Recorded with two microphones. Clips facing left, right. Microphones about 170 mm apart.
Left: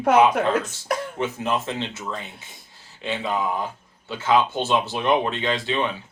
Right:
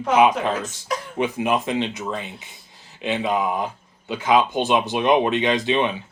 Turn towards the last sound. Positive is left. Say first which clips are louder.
# right 4 dB
turn(degrees=-20)  # may be behind; listen again after turning